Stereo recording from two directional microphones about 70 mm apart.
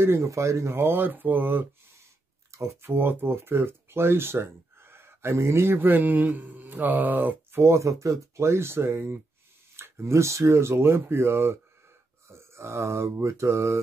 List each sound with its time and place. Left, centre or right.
0.0 s speech: right
2.5 s speech: right
12.3 s a sound: right